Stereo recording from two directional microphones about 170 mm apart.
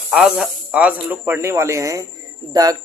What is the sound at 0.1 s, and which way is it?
Speech, 5° right (ahead or behind).